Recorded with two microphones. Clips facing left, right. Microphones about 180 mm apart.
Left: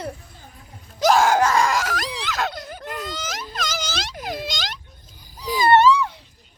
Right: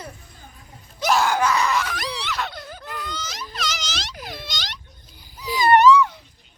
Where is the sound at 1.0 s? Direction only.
45° left (ahead or behind).